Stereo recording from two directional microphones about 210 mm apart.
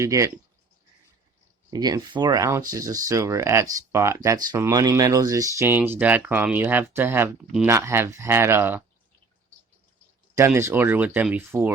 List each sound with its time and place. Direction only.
0.0 s speech: 15° right (ahead or behind)
1.7 s speech: 20° right (ahead or behind)
10.3 s speech: 10° right (ahead or behind)